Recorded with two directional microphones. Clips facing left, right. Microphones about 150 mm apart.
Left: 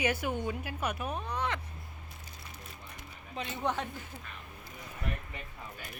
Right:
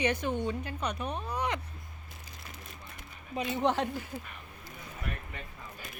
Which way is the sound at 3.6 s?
25° right (ahead or behind).